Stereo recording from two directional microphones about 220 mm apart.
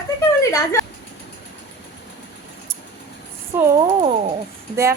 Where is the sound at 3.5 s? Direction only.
10° right (ahead or behind).